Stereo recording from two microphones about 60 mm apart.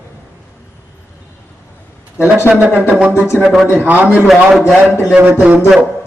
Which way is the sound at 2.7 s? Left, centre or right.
Right.